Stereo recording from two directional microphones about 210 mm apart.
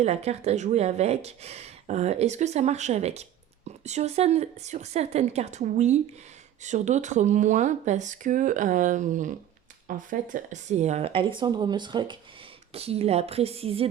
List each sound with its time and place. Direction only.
0.0 s speech: 30° right (ahead or behind)